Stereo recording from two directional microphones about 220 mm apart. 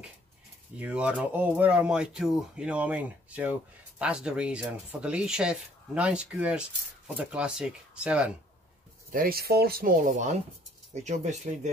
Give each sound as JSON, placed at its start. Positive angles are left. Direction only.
{"t": 0.7, "sound": "speech", "side_deg": -5}
{"t": 9.1, "sound": "speech", "side_deg": -40}